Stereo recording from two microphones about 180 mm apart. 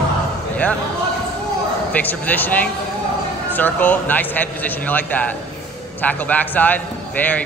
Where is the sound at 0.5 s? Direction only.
10° left (ahead or behind).